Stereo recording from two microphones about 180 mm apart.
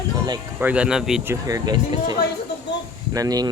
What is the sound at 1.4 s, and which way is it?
Speech, 20° right (ahead or behind).